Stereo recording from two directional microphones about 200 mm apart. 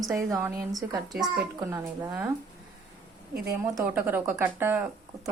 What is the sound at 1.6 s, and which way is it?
Speech, 15° right (ahead or behind).